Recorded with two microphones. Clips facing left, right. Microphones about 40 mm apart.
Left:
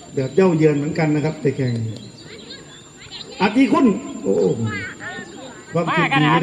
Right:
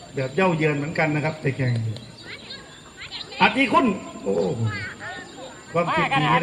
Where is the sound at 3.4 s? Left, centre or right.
Right.